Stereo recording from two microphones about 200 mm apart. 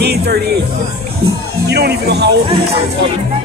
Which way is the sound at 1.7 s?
55° right (ahead or behind).